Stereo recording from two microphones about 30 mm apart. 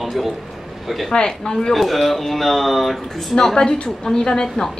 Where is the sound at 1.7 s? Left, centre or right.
Centre.